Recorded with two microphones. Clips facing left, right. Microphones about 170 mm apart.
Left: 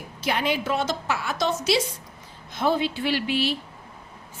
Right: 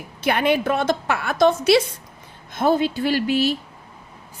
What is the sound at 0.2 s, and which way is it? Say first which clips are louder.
A woman's voice: right 6 dB; 60° right (ahead or behind).